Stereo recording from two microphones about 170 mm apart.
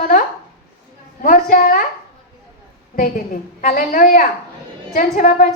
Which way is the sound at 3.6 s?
50° left (ahead or behind).